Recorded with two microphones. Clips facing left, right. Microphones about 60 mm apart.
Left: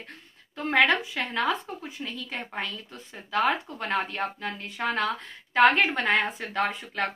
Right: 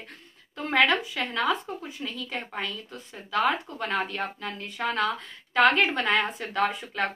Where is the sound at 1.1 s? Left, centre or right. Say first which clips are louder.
Even; centre.